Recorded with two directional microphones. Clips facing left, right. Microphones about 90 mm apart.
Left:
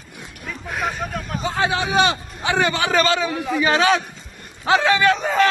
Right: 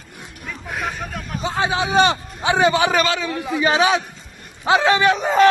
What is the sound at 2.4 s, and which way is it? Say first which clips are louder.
A man's voice: right 4 dB; 15° right (ahead or behind).